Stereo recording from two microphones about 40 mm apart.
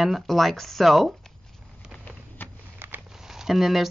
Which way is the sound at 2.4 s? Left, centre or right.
Left.